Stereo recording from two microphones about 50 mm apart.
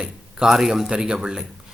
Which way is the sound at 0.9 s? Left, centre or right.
Centre.